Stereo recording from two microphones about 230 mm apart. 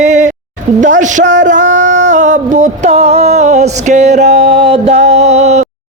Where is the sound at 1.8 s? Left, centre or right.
Right.